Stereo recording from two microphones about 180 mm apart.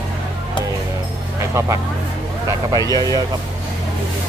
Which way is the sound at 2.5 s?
20° right (ahead or behind).